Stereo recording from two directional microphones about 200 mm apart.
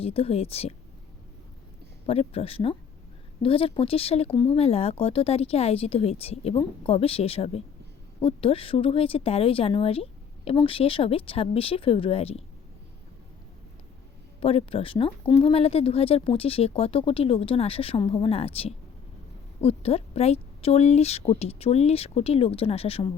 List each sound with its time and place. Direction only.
0.0 s speech: 30° left (ahead or behind)
2.0 s speech: 30° left (ahead or behind)
14.4 s speech: 30° left (ahead or behind)